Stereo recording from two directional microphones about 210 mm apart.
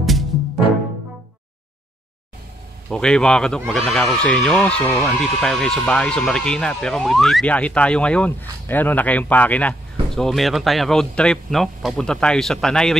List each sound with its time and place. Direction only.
2.9 s speech: 5° left (ahead or behind)